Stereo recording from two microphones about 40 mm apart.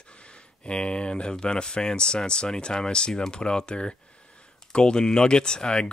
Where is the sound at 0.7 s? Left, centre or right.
Left.